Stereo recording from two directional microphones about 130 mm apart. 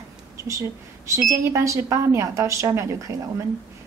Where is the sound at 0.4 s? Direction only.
25° right (ahead or behind).